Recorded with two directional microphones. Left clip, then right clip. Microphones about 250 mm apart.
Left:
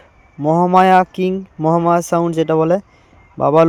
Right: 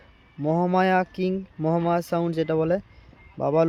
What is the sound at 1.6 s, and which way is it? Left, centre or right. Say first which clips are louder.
Speech: left 10 dB; centre.